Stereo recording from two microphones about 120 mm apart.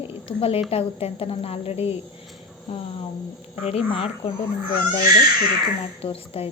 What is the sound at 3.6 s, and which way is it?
Speech, 55° left (ahead or behind).